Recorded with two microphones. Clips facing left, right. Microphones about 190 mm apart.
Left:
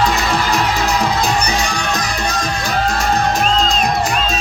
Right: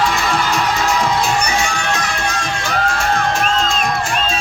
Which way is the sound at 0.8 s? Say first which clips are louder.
Even; 35° left (ahead or behind).